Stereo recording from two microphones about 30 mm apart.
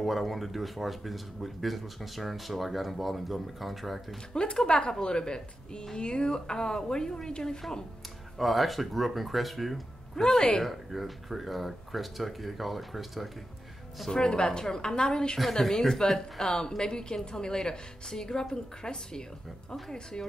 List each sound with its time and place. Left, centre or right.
0.0 s speech: centre
4.3 s a woman's voice: left
8.4 s speech: centre
10.1 s speech: centre
10.6 s speech: centre
14.1 s a woman's voice: left